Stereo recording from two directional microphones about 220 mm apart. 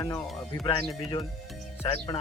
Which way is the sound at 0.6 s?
20° left (ahead or behind).